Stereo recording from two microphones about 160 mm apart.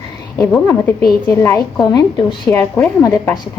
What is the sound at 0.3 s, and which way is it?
A woman's voice, 15° left (ahead or behind).